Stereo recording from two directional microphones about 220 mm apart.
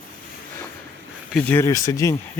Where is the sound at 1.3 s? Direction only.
10° left (ahead or behind).